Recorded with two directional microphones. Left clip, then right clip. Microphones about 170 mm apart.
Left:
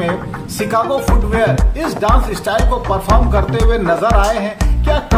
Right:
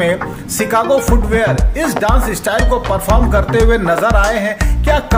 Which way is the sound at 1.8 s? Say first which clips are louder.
Right 1 dB; 15° right (ahead or behind).